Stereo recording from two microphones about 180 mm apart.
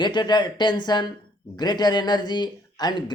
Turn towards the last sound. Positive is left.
turn(degrees=25)  # may be behind; listen again after turning